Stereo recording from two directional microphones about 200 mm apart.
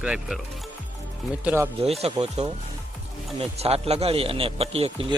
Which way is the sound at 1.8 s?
30° right (ahead or behind).